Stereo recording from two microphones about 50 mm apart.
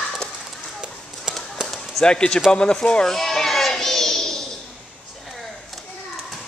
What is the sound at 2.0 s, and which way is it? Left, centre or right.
Speech, centre.